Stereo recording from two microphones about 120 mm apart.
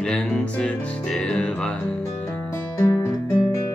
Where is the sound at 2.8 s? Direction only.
20° left (ahead or behind).